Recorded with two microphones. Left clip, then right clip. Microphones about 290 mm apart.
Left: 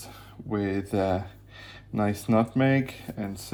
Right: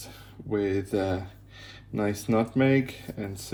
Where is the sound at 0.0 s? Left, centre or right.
Left.